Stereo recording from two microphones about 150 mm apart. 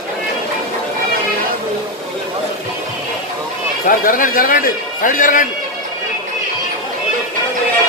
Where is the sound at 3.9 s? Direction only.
65° left (ahead or behind).